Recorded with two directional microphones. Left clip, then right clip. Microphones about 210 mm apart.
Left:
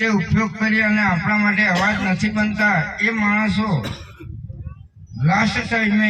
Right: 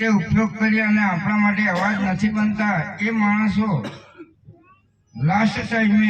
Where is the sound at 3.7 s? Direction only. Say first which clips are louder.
Left 2 dB; 35° left (ahead or behind).